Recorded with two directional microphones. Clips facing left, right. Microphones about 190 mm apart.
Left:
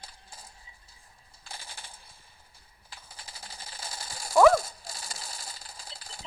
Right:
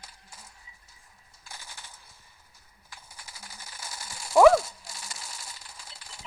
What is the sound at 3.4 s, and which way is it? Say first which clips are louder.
Ratchet: left 2 dB; 30° left (ahead or behind).